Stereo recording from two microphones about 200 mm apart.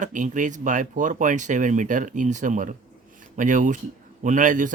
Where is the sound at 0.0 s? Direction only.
40° right (ahead or behind).